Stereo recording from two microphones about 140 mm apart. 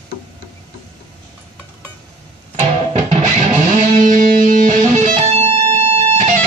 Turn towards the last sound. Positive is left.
turn(degrees=-50)  # may be behind; listen again after turning